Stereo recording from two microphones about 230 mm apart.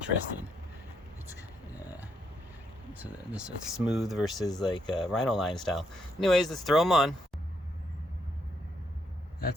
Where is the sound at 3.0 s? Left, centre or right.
Centre.